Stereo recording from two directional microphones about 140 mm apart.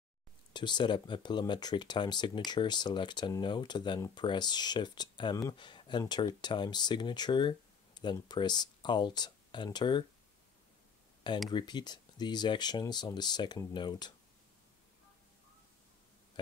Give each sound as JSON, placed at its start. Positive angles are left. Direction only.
{"t": 0.5, "sound": "speech", "side_deg": 30}
{"t": 11.5, "sound": "speech", "side_deg": 30}